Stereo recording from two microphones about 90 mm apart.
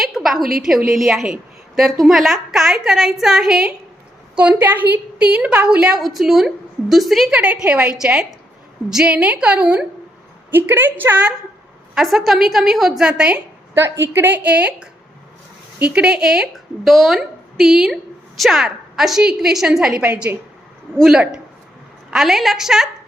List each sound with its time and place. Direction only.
0.0 s a woman's voice: centre (ahead or behind)
7.3 s a woman's voice: 10° right (ahead or behind)
10.5 s a woman's voice: 20° right (ahead or behind)
11.9 s a woman's voice: centre (ahead or behind)
13.7 s a woman's voice: 30° right (ahead or behind); by 22.9 s 5° right (ahead or behind)